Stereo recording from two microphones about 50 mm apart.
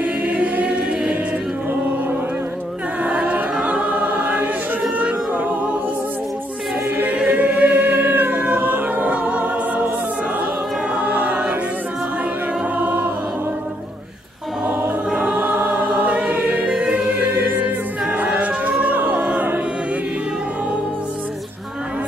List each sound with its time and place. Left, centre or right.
0.0 s choir: right
3.2 s choir: right
4.9 s music: right
7.2 s choir: right
11.0 s choir: right
12.7 s choir: right
15.3 s choir: right
16.6 s music: right